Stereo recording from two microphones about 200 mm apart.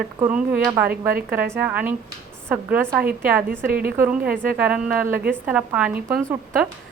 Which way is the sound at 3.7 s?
45° right (ahead or behind).